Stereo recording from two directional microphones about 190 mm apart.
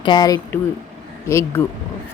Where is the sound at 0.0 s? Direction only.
20° left (ahead or behind).